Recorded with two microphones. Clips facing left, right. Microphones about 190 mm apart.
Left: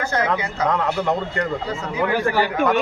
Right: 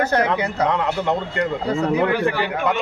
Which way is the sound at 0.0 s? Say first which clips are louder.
Right 4 dB; 65° right (ahead or behind).